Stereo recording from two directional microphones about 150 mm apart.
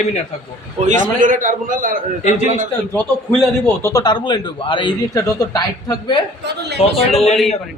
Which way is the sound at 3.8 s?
25° left (ahead or behind).